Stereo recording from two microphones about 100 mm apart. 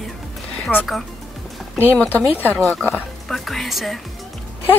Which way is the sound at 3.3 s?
Centre (ahead or behind).